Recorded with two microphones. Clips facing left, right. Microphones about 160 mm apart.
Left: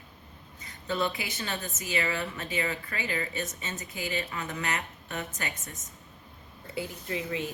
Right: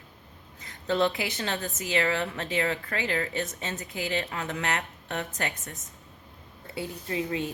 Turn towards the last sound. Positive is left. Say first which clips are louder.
# right 3 dB
turn(degrees=-30)  # may be behind; listen again after turning